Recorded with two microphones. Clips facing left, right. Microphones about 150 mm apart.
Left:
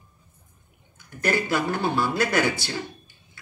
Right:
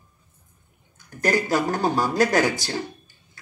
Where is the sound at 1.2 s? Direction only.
40° right (ahead or behind).